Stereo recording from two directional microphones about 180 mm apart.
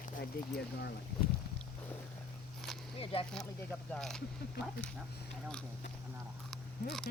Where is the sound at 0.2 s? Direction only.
65° left (ahead or behind).